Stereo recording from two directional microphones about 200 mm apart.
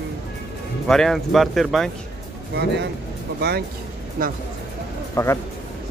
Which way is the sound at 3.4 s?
55° right (ahead or behind).